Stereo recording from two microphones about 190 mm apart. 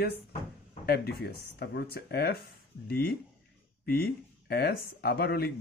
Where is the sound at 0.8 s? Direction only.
55° left (ahead or behind).